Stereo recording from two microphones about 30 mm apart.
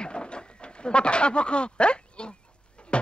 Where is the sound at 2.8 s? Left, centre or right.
Left.